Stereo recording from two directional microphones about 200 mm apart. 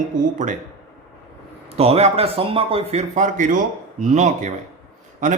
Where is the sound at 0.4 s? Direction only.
40° right (ahead or behind).